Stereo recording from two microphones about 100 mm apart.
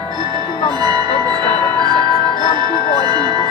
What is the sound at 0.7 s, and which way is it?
Music, 45° right (ahead or behind).